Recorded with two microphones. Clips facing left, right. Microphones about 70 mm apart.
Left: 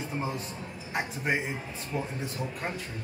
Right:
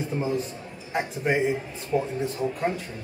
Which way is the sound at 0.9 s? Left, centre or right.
Centre.